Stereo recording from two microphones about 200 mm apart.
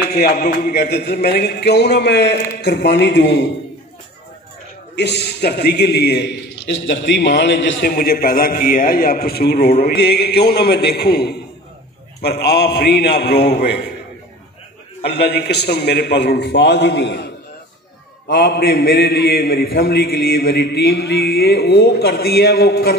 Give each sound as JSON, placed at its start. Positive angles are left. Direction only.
{"t": 0.1, "sound": "a man's voice", "side_deg": 50}
{"t": 4.9, "sound": "a man's voice", "side_deg": 55}
{"t": 15.0, "sound": "a man's voice", "side_deg": 55}
{"t": 18.3, "sound": "a man's voice", "side_deg": 50}